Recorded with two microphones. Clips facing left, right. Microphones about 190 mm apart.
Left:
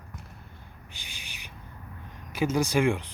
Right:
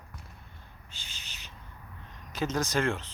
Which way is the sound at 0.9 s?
15° left (ahead or behind).